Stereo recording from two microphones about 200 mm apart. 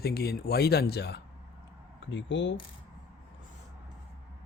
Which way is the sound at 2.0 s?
65° left (ahead or behind).